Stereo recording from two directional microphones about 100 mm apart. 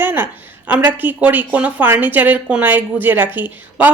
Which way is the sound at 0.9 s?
20° right (ahead or behind).